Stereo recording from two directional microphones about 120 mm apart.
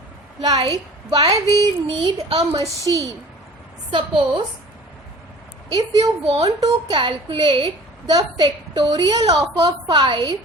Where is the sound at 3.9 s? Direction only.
40° right (ahead or behind).